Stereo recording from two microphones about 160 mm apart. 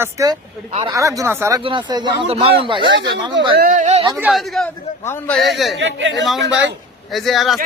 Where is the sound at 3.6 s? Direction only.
55° right (ahead or behind).